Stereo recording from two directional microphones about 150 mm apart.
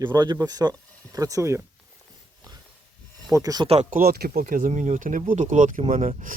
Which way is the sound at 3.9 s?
80° right.